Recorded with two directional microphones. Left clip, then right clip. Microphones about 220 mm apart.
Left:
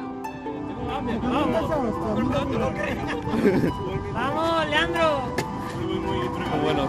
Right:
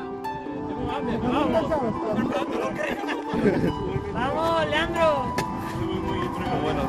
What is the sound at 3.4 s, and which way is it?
Speech, 55° left (ahead or behind).